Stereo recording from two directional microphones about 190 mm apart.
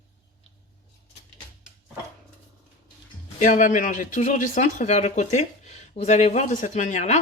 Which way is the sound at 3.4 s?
40° left (ahead or behind).